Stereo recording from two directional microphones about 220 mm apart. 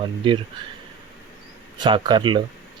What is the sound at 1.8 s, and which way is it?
Speech, 20° right (ahead or behind).